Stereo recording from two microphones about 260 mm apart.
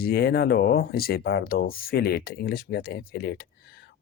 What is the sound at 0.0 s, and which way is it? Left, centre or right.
Speech, left.